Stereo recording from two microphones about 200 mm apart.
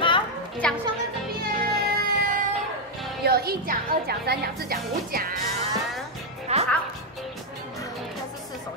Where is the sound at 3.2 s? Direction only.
50° right (ahead or behind).